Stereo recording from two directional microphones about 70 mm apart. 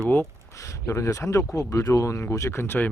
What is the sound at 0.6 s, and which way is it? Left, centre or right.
Speech, left.